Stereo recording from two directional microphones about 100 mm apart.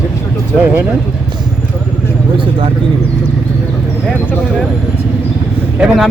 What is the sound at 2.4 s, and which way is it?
Speech, 60° right (ahead or behind).